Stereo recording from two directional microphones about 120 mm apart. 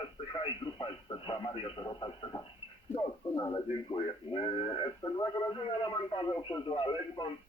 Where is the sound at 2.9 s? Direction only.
25° left (ahead or behind).